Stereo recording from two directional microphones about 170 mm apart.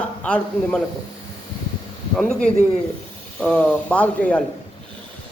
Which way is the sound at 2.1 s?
5° left (ahead or behind).